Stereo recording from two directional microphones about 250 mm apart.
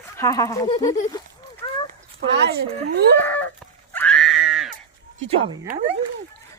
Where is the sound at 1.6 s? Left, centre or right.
Centre.